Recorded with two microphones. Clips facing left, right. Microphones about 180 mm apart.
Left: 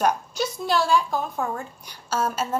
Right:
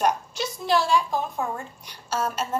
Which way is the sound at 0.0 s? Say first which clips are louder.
Left 1 dB; centre (ahead or behind).